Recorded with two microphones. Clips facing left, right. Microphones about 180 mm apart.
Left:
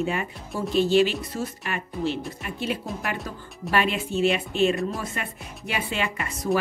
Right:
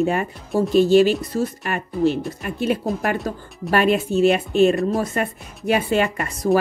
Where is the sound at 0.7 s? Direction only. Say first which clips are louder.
Right 5 dB; 45° right (ahead or behind).